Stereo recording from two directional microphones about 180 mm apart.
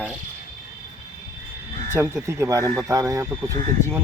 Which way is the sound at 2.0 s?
15° right (ahead or behind).